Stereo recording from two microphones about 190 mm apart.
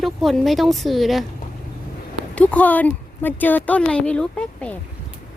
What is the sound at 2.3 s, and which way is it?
A woman's voice, 10° left (ahead or behind).